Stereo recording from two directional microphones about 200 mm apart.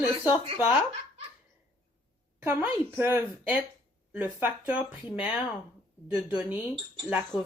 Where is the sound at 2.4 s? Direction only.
10° right (ahead or behind).